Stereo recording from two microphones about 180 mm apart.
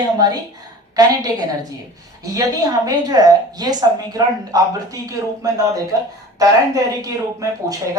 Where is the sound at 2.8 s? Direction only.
20° right (ahead or behind).